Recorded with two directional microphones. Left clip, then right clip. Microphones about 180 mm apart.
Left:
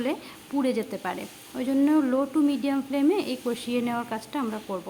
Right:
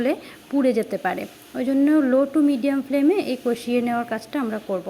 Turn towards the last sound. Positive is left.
turn(degrees=-15)  # may be behind; listen again after turning